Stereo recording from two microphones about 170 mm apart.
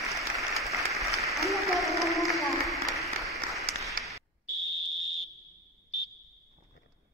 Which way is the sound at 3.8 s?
Centre (ahead or behind).